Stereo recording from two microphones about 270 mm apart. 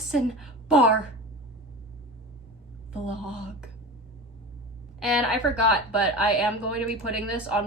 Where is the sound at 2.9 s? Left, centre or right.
Centre.